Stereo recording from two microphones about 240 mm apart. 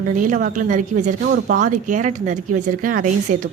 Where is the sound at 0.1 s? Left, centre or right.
Right.